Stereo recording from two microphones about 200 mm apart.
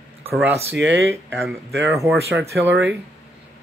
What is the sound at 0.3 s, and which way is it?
Speech, 10° right (ahead or behind).